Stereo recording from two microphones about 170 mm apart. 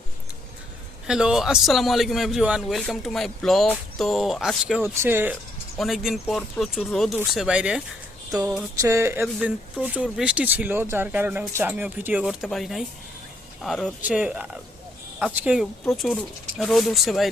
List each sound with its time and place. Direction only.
1.0 s a man's voice: 5° right (ahead or behind)
5.7 s a man's voice: centre (ahead or behind)
8.8 s speech: 15° right (ahead or behind)
9.2 s a man's voice: 5° right (ahead or behind)